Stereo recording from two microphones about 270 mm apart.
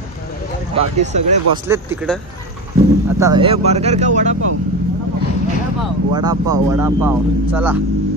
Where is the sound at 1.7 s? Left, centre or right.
Centre.